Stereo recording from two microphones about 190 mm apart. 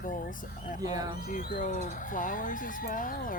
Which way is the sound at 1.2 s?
50° left (ahead or behind).